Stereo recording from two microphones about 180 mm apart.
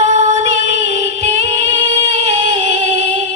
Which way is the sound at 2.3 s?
35° right (ahead or behind).